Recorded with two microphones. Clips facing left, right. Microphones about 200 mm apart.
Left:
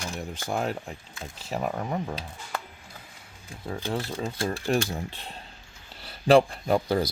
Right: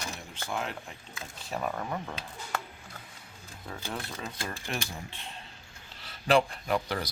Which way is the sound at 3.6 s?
30° left (ahead or behind).